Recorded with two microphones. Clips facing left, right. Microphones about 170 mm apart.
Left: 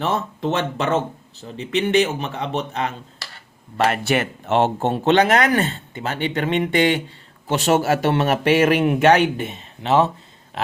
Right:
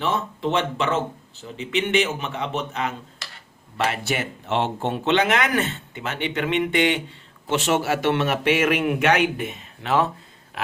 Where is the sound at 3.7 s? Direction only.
50° left (ahead or behind).